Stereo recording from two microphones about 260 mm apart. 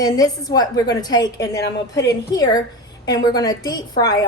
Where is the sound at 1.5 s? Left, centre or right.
Left.